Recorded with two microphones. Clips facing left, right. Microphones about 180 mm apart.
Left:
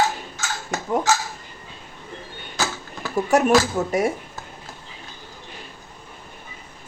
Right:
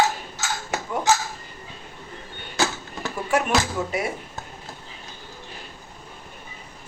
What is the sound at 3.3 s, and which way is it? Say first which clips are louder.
Speech: left 5 dB; 45° left (ahead or behind).